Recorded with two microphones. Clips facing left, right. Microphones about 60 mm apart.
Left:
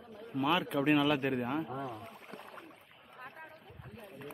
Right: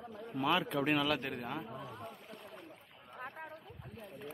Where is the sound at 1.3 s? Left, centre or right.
Centre.